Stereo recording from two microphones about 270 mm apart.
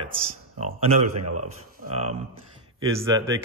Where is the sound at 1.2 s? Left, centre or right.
Right.